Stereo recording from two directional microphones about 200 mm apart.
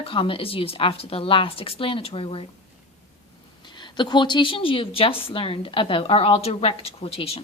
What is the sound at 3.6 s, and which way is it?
Speech, 20° left (ahead or behind).